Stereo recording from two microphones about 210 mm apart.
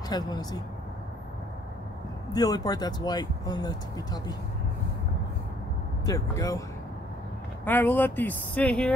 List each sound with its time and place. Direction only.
0.1 s speech: 20° left (ahead or behind)
2.3 s speech: 20° left (ahead or behind)
6.0 s speech: 15° left (ahead or behind)
7.6 s speech: 10° left (ahead or behind)